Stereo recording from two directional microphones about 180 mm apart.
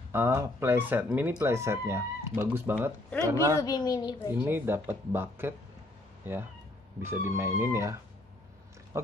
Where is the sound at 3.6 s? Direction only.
20° left (ahead or behind).